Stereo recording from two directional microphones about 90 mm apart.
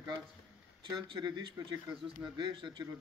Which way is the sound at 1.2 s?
55° right (ahead or behind).